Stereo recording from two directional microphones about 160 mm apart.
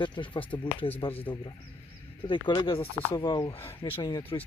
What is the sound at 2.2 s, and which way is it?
Mantra, 30° left (ahead or behind).